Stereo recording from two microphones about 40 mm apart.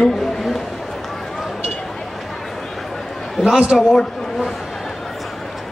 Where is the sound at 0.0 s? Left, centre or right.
Centre.